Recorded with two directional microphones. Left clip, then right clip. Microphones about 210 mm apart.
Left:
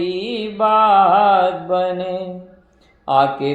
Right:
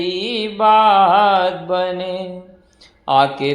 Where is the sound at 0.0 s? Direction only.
20° right (ahead or behind).